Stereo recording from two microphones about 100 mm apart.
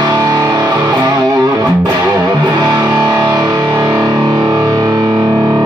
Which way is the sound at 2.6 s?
35° right (ahead or behind).